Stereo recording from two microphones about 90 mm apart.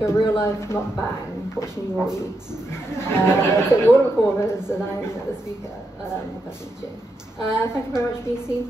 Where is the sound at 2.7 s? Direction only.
30° left (ahead or behind).